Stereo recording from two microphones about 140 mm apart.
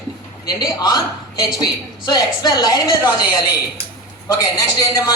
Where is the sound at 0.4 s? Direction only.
30° left (ahead or behind).